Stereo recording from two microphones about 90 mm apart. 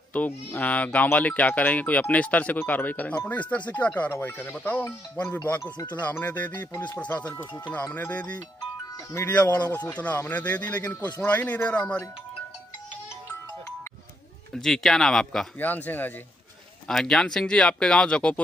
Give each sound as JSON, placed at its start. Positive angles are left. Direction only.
{"t": 0.1, "sound": "speech", "side_deg": 20}
{"t": 14.5, "sound": "speech", "side_deg": 5}
{"t": 15.6, "sound": "speech", "side_deg": 20}
{"t": 16.8, "sound": "speech", "side_deg": 5}